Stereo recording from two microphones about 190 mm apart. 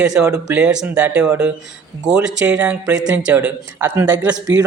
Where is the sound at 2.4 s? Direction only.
5° right (ahead or behind).